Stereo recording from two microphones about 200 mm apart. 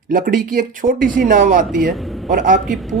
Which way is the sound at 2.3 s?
40° right (ahead or behind).